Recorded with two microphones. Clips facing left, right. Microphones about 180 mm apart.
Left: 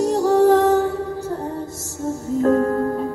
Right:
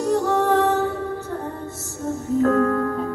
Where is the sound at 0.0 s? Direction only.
35° left (ahead or behind).